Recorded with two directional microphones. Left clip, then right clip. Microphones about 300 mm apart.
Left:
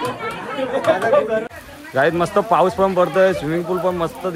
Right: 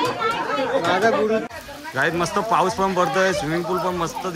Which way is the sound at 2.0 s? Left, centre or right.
Centre.